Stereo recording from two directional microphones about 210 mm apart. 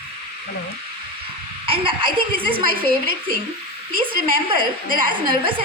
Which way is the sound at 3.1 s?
45° right (ahead or behind).